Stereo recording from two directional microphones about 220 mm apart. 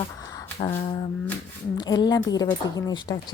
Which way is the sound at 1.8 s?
20° left (ahead or behind).